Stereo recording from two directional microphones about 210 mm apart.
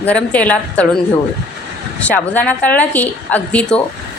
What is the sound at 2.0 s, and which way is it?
A woman's voice, 5° left (ahead or behind).